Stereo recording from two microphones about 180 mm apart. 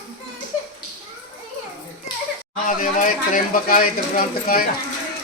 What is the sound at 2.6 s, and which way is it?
Speech, 45° left (ahead or behind).